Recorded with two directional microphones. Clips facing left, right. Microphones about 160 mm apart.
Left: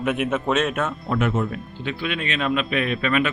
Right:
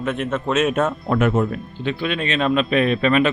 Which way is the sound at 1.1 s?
50° right (ahead or behind).